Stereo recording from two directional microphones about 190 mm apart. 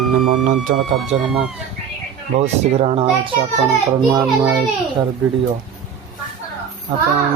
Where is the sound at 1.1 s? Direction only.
35° right (ahead or behind).